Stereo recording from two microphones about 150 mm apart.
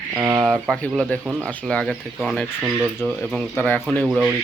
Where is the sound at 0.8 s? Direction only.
10° left (ahead or behind).